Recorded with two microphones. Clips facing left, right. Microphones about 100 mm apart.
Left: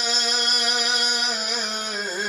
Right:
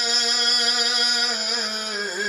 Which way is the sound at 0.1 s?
30° left (ahead or behind).